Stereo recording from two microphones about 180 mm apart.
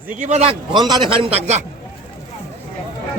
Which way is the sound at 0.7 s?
25° right (ahead or behind).